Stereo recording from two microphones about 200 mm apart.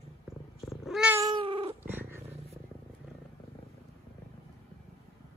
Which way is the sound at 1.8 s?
10° right (ahead or behind).